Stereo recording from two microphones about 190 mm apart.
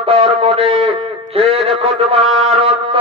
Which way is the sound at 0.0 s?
30° right (ahead or behind).